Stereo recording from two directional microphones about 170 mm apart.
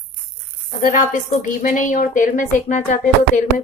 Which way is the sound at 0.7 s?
50° left (ahead or behind).